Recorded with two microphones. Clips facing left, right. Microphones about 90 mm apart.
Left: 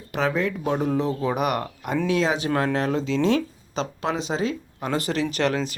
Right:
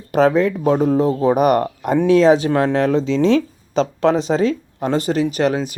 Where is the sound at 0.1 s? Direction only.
45° right (ahead or behind); by 3.4 s 30° right (ahead or behind).